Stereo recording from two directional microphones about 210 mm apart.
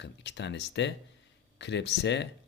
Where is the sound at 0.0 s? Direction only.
55° left (ahead or behind).